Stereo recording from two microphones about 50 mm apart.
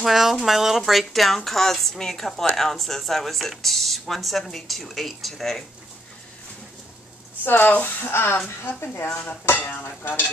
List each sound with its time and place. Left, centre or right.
0.0 s speech: centre
7.4 s speech: left
9.1 s dishes: left
9.7 s speech: left